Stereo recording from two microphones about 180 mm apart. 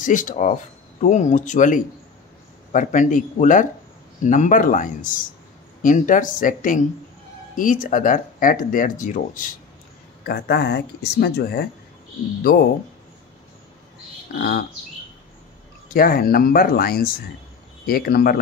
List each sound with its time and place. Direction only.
0.0 s speech: 45° left (ahead or behind)
10.2 s speech: 60° left (ahead or behind)
14.4 s speech: 55° left (ahead or behind)
15.9 s speech: 55° left (ahead or behind)